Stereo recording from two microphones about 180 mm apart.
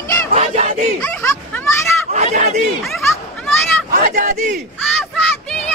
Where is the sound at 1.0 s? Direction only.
15° left (ahead or behind).